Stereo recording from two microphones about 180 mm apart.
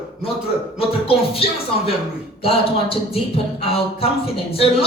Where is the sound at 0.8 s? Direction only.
30° left (ahead or behind).